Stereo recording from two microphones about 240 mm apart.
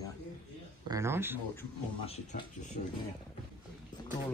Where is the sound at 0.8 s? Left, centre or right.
Centre.